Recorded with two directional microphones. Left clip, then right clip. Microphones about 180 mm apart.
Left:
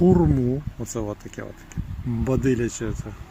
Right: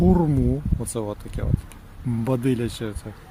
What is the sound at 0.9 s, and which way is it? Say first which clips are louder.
Speech: even; 10° right (ahead or behind).